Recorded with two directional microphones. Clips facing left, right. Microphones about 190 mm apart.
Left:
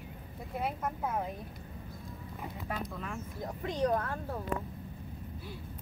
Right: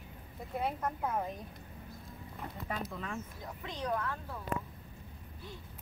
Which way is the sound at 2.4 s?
Centre (ahead or behind).